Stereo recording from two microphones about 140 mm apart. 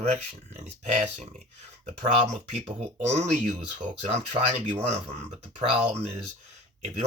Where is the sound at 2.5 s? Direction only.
50° right (ahead or behind).